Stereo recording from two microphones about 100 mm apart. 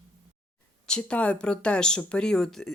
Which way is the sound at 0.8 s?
10° left (ahead or behind).